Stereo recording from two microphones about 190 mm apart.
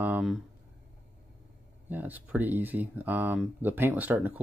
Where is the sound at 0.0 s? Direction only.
5° right (ahead or behind).